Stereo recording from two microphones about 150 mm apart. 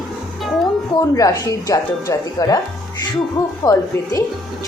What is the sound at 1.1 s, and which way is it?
Speech, 25° left (ahead or behind).